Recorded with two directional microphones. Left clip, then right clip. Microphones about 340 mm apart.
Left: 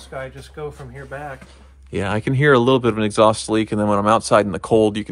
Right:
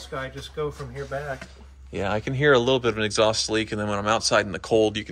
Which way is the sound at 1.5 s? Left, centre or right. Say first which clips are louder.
Left 7 dB; left.